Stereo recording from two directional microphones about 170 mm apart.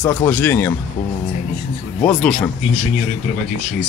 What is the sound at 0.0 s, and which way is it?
Speech, 10° left (ahead or behind).